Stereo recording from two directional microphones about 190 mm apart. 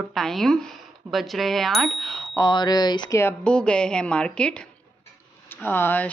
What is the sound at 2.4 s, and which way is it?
Speech, 20° left (ahead or behind).